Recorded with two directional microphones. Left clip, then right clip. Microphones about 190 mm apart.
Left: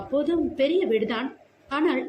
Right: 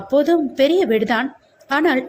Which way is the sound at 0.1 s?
35° right (ahead or behind).